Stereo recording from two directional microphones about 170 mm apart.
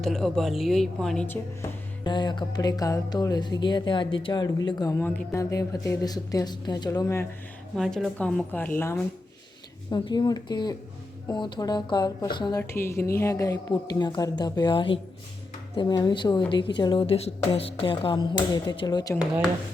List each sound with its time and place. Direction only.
0.0 s a woman's voice: centre (ahead or behind)
2.0 s a woman's voice: 25° left (ahead or behind)
7.8 s a woman's voice: centre (ahead or behind)
9.9 s a woman's voice: 25° left (ahead or behind)